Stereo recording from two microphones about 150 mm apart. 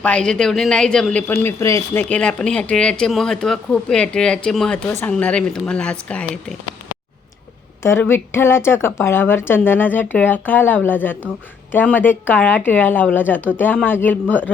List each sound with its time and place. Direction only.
0.0 s speech: 5° left (ahead or behind)
1.3 s a woman's voice: 15° left (ahead or behind)
7.8 s a woman's voice: 15° left (ahead or behind)